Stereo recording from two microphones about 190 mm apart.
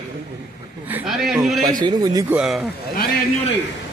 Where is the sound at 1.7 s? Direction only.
20° right (ahead or behind).